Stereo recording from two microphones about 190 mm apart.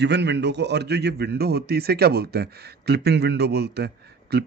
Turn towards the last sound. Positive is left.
turn(degrees=-60)  # may be behind; listen again after turning